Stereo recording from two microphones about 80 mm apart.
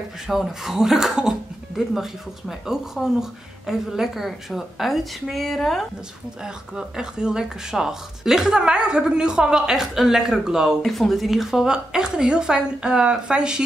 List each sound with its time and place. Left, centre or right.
0.3 s speech: centre
6.4 s speech: centre